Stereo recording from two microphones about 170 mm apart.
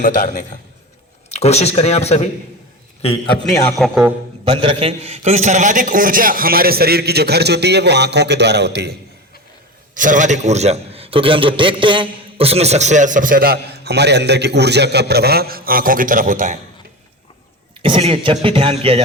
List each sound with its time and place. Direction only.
0.0 s a man's voice: 55° left (ahead or behind)
1.3 s speech: 40° left (ahead or behind)
3.8 s a man's voice: centre (ahead or behind)
4.4 s a man's voice: 30° right (ahead or behind); by 9.0 s 75° right (ahead or behind)
9.9 s a man's voice: 50° right (ahead or behind)
17.8 s speech: 30° right (ahead or behind)